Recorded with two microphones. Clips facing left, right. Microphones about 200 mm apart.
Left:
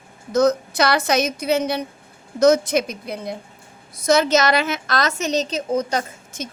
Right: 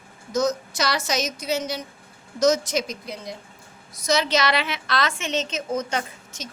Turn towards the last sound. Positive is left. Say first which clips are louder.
# left 4 dB
turn(degrees=35)  # may be behind; listen again after turning